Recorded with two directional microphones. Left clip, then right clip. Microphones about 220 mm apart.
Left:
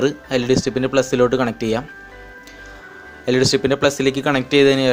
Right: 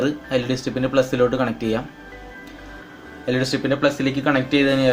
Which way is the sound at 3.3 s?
40° left (ahead or behind).